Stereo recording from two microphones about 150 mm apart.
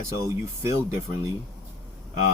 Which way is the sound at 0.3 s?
20° right (ahead or behind).